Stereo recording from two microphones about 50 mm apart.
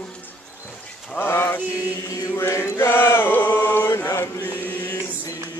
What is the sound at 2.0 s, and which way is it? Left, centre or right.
Chant, left.